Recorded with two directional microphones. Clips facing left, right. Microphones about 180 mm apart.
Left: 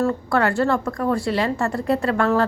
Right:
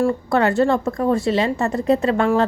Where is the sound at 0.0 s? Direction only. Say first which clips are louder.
Right 2 dB; 15° right (ahead or behind).